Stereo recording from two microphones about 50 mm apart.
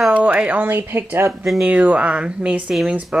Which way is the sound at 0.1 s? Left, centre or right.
Right.